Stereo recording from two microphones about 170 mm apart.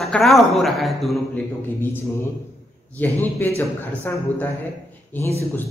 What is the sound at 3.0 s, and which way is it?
Speech, 10° left (ahead or behind).